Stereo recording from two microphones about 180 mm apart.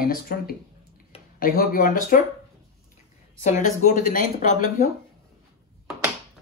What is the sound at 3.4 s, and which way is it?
Speech, 45° left (ahead or behind).